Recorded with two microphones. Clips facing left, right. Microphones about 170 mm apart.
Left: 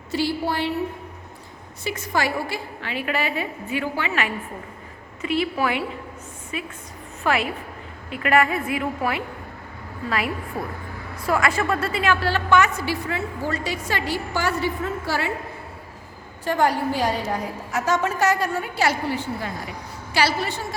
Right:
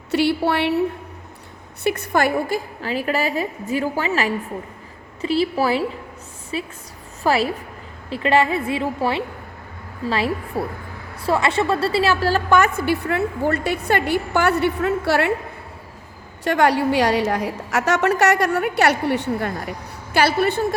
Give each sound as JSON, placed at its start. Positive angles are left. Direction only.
{"t": 0.1, "sound": "a woman's voice", "side_deg": -70}
{"t": 1.8, "sound": "a woman's voice", "side_deg": -60}
{"t": 2.8, "sound": "a woman's voice", "side_deg": -40}
{"t": 16.4, "sound": "a woman's voice", "side_deg": -75}